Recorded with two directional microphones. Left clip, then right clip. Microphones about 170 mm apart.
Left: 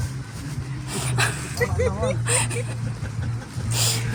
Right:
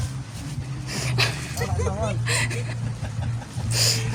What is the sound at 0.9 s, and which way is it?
Dog, 25° right (ahead or behind).